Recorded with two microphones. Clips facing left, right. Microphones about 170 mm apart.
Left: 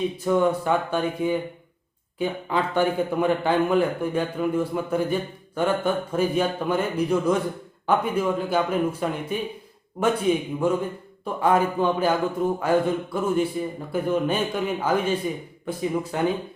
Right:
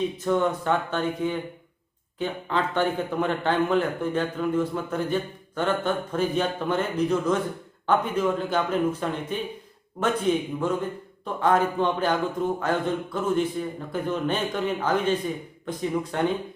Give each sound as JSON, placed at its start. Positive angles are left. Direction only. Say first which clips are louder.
{"t": 0.3, "sound": "a man's voice", "louder": "left 3 dB", "side_deg": 10}